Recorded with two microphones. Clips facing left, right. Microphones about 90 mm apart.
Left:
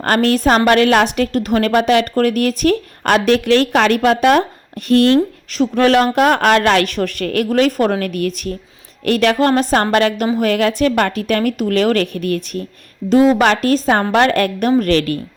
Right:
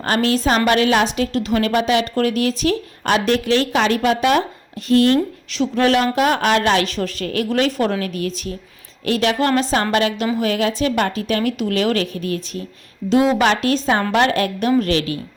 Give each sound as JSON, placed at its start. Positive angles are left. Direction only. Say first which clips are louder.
{"t": 0.0, "sound": "a woman's voice", "louder": "left 4 dB", "side_deg": 55}
{"t": 4.9, "sound": "speech", "louder": "left 2 dB", "side_deg": 65}
{"t": 5.5, "sound": "a woman's voice", "louder": "left 3 dB", "side_deg": 45}
{"t": 7.5, "sound": "a woman's voice", "louder": "left 4 dB", "side_deg": 45}
{"t": 13.1, "sound": "a woman's voice", "louder": "left 4 dB", "side_deg": 45}